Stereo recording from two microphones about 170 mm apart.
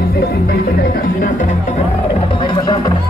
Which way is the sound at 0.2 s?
60° left (ahead or behind).